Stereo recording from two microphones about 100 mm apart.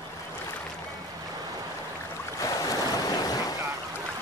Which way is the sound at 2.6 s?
40° left (ahead or behind).